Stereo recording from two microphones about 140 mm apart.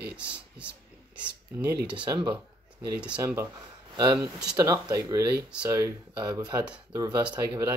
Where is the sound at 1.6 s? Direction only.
30° right (ahead or behind).